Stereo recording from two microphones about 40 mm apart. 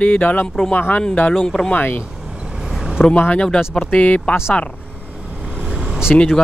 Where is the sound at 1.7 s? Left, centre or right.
Left.